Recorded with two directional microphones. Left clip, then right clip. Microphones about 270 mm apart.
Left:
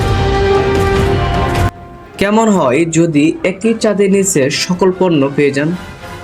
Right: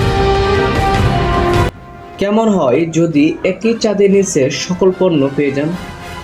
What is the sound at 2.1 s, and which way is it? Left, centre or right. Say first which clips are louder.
Speech: left 2 dB; left.